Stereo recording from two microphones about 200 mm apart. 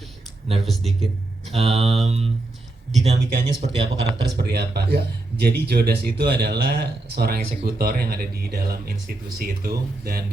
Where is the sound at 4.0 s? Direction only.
60° right (ahead or behind).